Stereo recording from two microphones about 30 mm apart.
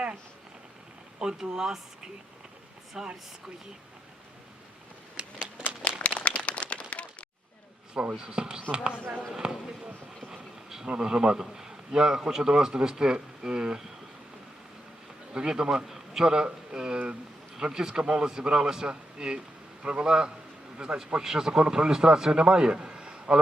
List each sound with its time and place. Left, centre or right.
1.2 s a man's voice: right
3.0 s speech: centre
5.1 s a sound: right
6.0 s a sound: left
8.1 s a man's voice: right
10.8 s a man's voice: right
15.3 s a man's voice: right
15.9 s a sound: centre
16.2 s a man's voice: right
21.2 s a man's voice: right